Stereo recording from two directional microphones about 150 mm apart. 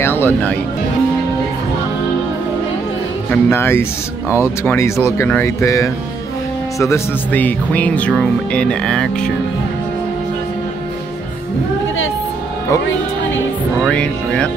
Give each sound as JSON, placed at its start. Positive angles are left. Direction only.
{"t": 0.0, "sound": "speech", "side_deg": 15}
{"t": 3.3, "sound": "speech", "side_deg": 15}
{"t": 8.1, "sound": "music", "side_deg": 5}
{"t": 13.8, "sound": "speech", "side_deg": 5}